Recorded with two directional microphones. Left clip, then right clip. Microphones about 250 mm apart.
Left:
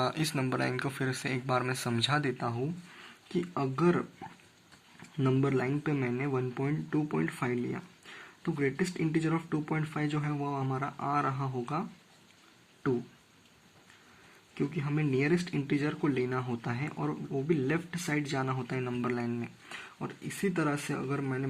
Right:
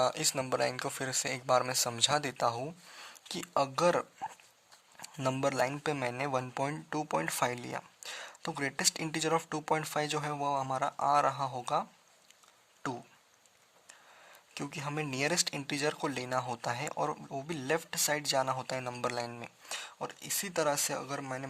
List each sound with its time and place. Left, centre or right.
0.0 s speech: right
14.5 s speech: right